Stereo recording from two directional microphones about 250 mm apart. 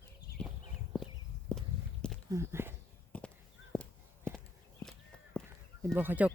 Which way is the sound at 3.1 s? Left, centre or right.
Centre.